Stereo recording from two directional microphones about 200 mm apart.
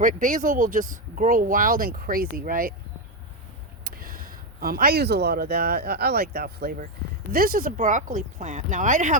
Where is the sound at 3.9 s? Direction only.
45° right (ahead or behind).